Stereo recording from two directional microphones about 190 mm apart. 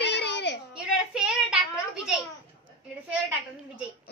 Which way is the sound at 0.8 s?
5° right (ahead or behind).